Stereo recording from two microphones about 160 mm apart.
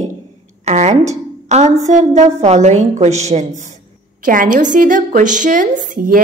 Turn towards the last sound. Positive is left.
turn(degrees=-60)  # may be behind; listen again after turning